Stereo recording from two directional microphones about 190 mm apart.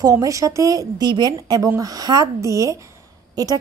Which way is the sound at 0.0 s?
15° right (ahead or behind).